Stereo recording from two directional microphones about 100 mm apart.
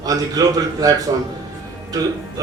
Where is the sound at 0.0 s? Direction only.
35° right (ahead or behind).